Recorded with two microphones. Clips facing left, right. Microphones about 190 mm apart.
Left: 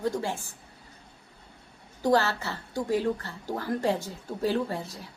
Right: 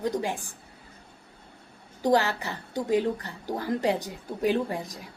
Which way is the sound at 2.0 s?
15° right (ahead or behind).